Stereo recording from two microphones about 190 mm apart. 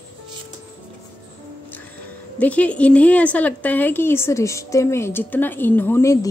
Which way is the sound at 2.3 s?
5° left (ahead or behind).